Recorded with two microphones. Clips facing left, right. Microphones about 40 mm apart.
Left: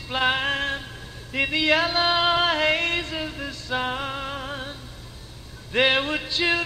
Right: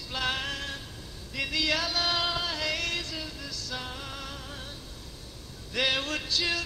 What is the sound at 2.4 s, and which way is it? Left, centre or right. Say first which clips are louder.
Music: left 10 dB; left.